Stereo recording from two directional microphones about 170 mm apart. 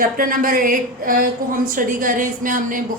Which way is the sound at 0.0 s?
55° right (ahead or behind).